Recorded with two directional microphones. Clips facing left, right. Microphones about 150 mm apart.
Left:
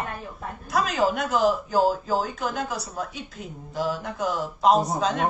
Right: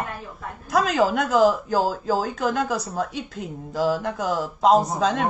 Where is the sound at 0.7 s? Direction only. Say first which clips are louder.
Right 3 dB; 90° right.